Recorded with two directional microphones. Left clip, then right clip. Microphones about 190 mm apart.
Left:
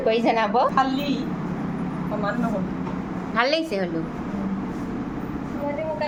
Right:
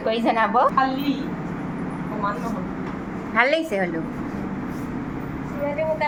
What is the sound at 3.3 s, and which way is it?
Speech, 5° left (ahead or behind).